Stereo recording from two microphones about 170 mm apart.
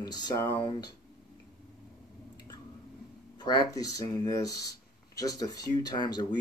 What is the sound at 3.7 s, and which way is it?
Speech, 20° left (ahead or behind).